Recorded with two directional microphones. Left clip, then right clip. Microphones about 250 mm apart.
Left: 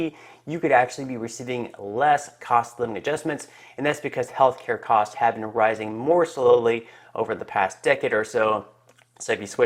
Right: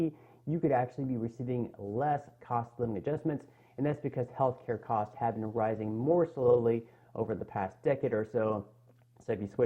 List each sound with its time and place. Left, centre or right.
0.0 s speech: centre